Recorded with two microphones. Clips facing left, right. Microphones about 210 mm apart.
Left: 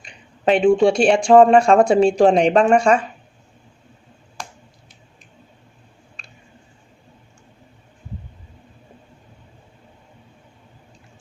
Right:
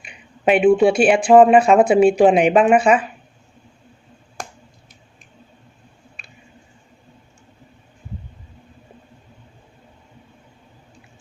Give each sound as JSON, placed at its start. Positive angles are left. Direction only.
{"t": 0.0, "sound": "speech", "side_deg": -10}